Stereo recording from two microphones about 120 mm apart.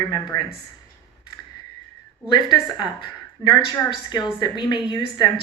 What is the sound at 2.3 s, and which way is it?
A woman's voice, 40° left (ahead or behind).